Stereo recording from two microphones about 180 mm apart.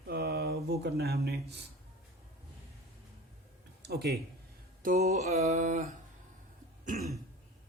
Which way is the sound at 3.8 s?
60° right (ahead or behind).